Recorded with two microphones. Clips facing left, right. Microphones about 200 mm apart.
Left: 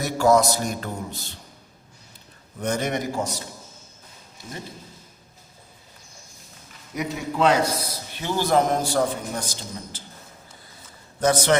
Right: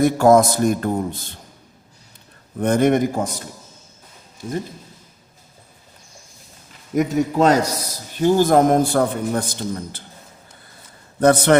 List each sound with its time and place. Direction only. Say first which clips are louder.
0.0 s a man's voice: right 6 dB; 50° right (ahead or behind)
2.6 s a man's voice: right 9 dB; 55° right (ahead or behind)
6.9 s a man's voice: right 9 dB; 45° right (ahead or behind)
11.2 s a man's voice: right 6 dB; 60° right (ahead or behind)